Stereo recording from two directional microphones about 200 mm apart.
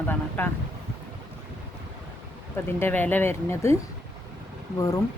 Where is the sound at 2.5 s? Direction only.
10° left (ahead or behind).